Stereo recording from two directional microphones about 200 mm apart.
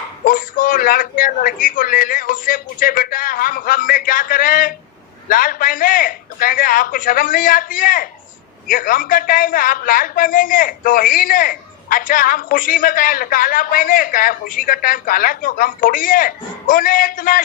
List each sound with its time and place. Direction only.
0.3 s a man's voice: 45° left (ahead or behind)